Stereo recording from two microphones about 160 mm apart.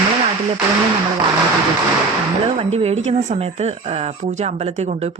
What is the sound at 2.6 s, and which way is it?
Speech, 40° right (ahead or behind).